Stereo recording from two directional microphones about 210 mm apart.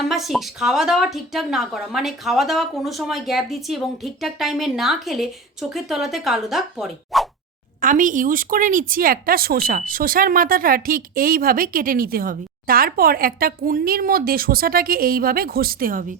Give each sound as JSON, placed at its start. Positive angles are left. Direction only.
{"t": 0.1, "sound": "speech", "side_deg": 0}
{"t": 7.8, "sound": "speech", "side_deg": -40}